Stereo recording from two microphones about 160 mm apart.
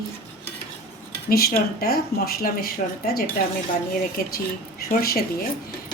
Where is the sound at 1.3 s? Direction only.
75° left (ahead or behind).